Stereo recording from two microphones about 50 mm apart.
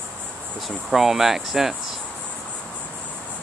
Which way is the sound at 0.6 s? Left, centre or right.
Centre.